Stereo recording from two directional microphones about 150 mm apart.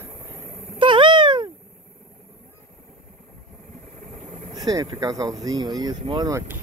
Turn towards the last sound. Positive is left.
turn(degrees=-25)  # may be behind; listen again after turning